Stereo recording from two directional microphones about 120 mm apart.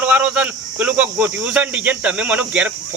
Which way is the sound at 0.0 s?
10° right (ahead or behind).